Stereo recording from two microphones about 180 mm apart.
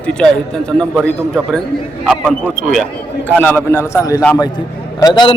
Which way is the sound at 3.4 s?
10° left (ahead or behind).